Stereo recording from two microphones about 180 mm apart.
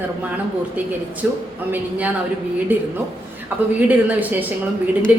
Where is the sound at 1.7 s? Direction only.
10° right (ahead or behind).